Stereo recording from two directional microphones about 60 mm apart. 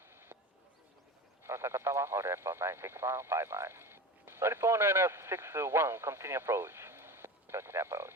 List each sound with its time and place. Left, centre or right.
1.5 s speech: right